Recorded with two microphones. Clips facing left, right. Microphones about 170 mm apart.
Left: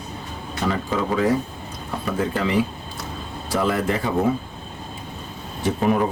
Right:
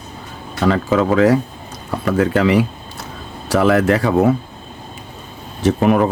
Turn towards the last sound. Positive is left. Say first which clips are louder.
# right 6 dB
turn(degrees=-85)